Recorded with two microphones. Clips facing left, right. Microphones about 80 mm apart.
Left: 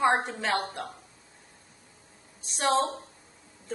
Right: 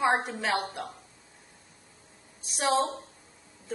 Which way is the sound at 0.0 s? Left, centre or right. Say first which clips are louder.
Left 1 dB; centre.